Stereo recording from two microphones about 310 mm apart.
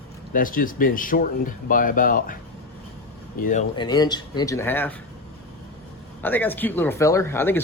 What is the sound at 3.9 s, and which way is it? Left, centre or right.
Speech, centre.